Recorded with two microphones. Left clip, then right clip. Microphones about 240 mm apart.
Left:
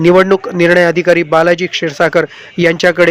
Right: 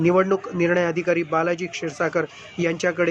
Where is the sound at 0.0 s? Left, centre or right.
Left.